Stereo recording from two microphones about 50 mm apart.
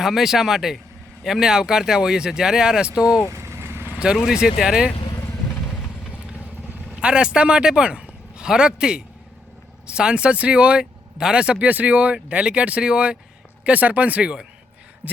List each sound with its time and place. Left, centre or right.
0.0 s speech: centre
3.2 s vehicle: right
4.3 s speech: centre
5.6 s vehicle: left
7.0 s speech: centre
11.6 s speech: right